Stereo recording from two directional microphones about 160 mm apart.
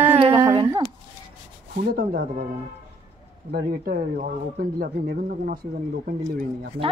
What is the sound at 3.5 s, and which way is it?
Speech, 70° right (ahead or behind).